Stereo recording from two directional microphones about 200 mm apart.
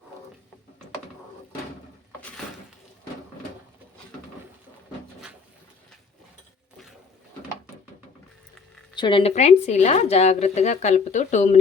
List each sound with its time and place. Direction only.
9.0 s speech: 25° left (ahead or behind)
9.3 s speech: 35° left (ahead or behind)